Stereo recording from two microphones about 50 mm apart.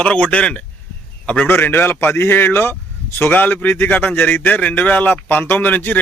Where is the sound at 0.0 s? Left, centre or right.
Left.